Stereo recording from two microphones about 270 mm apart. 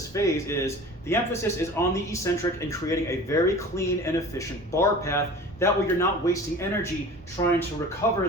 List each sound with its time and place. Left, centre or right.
0.1 s speech: centre